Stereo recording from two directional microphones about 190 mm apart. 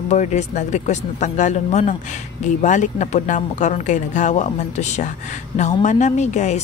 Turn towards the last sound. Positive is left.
turn(degrees=40)  # may be behind; listen again after turning